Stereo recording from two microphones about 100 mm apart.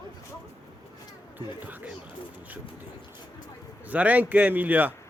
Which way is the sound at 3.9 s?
15° right (ahead or behind).